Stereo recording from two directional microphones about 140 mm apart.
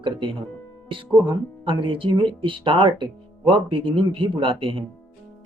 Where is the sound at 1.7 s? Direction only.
35° right (ahead or behind).